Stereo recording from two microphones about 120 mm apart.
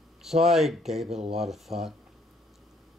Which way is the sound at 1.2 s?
60° right (ahead or behind).